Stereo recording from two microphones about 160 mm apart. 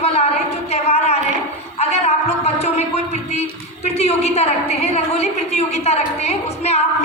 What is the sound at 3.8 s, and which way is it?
A woman's voice, 40° left (ahead or behind).